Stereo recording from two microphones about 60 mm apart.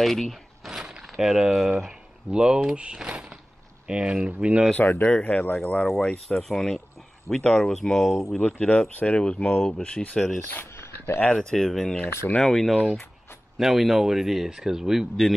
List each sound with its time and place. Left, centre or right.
0.0 s speech: centre
0.7 s a sound: centre
3.8 s speech: centre
4.7 s speech: left
5.1 s speech: centre
8.4 s speech: centre
10.7 s a sound: left
11.1 s speech: centre